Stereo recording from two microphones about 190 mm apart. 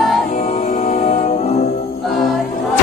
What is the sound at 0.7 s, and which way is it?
Music, 40° left (ahead or behind).